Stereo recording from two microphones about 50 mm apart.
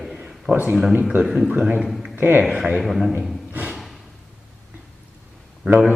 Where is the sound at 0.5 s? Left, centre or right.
Right.